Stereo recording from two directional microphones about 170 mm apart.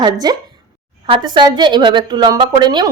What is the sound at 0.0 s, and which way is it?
A woman's voice, 25° right (ahead or behind).